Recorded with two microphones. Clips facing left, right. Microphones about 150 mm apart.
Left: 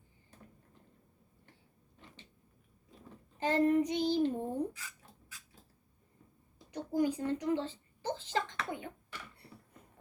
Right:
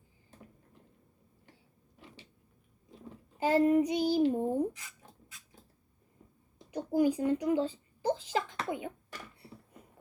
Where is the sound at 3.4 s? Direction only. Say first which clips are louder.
Right 3 dB; 10° right (ahead or behind).